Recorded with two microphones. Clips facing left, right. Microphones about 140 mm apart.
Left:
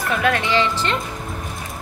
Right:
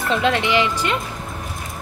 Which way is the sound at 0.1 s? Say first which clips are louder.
Right 1 dB; 20° right (ahead or behind).